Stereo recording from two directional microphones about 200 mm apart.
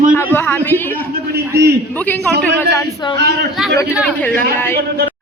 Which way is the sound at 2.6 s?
20° left (ahead or behind).